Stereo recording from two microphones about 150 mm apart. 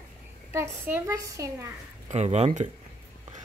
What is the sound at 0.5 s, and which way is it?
Speech, 15° right (ahead or behind).